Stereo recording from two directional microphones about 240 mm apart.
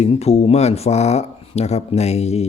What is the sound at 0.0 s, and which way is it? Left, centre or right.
Speech, left.